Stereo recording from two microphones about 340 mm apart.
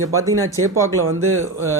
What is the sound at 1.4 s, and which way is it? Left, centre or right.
Music, centre.